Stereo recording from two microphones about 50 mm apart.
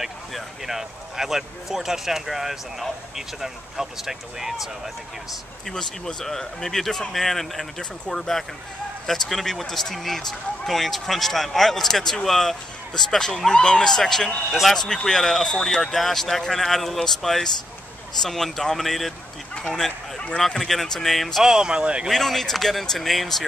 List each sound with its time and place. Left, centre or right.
0.0 s speech: centre
5.7 s speech: centre
14.9 s speech: centre
21.5 s speech: centre
22.1 s speech: centre